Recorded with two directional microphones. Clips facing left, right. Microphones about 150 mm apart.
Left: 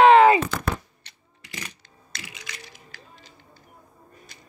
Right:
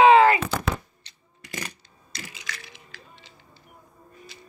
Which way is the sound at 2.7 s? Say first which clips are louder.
Even; 45° left (ahead or behind).